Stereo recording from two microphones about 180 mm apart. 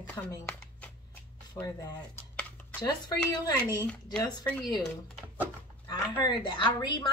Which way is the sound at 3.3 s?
25° left (ahead or behind).